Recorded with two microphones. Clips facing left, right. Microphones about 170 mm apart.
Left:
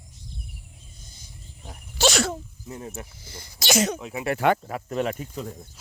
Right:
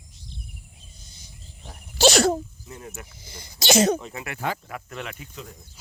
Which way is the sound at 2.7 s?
30° left (ahead or behind).